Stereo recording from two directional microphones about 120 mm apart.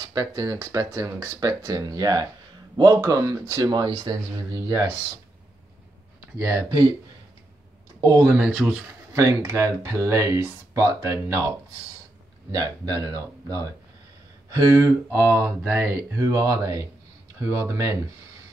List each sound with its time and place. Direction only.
0.0 s speech: 30° right (ahead or behind)
6.3 s speech: 20° right (ahead or behind)
8.0 s speech: 25° right (ahead or behind)
8.4 s speech: 10° right (ahead or behind)
9.1 s speech: 25° right (ahead or behind)
16.2 s speech: 30° right (ahead or behind)